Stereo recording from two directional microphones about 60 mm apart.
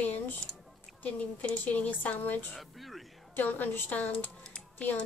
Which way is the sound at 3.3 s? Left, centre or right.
Left.